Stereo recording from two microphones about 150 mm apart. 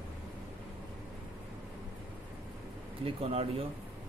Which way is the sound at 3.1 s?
40° right (ahead or behind).